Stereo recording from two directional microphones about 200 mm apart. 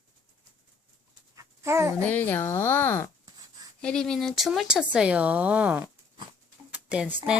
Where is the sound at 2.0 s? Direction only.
10° left (ahead or behind); by 5.9 s 5° right (ahead or behind).